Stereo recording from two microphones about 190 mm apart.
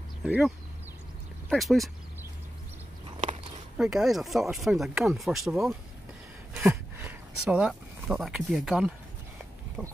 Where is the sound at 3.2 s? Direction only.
40° right (ahead or behind).